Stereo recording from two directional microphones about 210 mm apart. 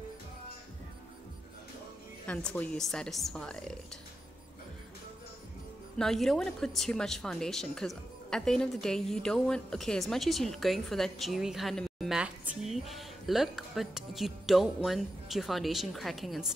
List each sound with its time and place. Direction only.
2.2 s a woman's voice: 5° left (ahead or behind)
5.9 s a woman's voice: centre (ahead or behind)